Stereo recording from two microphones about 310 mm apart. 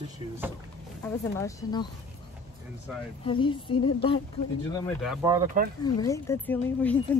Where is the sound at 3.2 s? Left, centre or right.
Centre.